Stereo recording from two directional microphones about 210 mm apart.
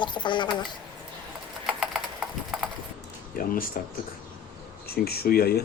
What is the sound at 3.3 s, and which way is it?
Speech, 40° left (ahead or behind).